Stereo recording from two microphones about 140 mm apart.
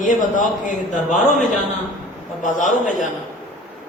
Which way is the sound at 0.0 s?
65° left (ahead or behind).